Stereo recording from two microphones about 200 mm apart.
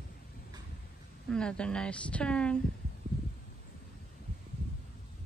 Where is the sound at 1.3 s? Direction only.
5° left (ahead or behind).